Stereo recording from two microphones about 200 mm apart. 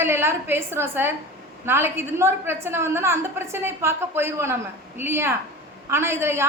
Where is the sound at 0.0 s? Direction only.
10° right (ahead or behind).